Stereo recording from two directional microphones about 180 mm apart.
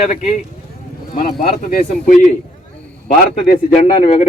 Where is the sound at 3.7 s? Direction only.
35° left (ahead or behind).